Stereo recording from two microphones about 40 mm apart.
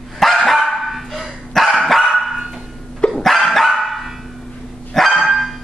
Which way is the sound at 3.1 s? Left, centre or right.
Centre.